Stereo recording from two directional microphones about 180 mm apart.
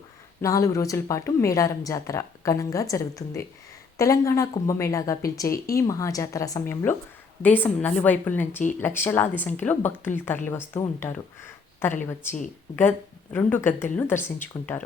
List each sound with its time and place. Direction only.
0.4 s speech: 20° left (ahead or behind)
13.3 s speech: 10° left (ahead or behind)